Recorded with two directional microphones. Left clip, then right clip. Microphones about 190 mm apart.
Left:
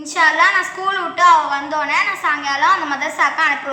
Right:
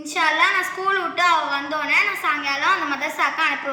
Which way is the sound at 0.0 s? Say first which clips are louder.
Left 5 dB; 25° right (ahead or behind).